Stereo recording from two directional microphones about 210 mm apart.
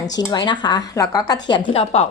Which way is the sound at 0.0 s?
15° left (ahead or behind).